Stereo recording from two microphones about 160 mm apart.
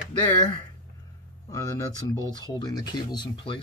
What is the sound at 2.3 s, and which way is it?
Speech, 25° left (ahead or behind).